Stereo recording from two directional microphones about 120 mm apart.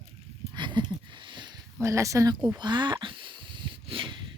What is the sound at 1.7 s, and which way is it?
Speech, 25° right (ahead or behind).